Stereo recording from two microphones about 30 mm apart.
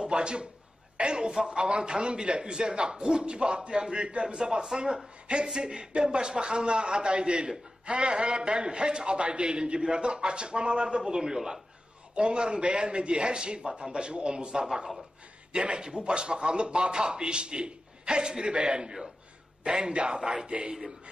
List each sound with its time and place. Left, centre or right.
0.0 s a sound: right
0.9 s speech: right
1.3 s speech: centre
1.6 s speech: right; by 11.6 s centre
12.2 s speech: right